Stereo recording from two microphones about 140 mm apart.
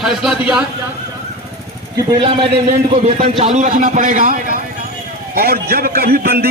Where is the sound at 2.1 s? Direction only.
40° right (ahead or behind).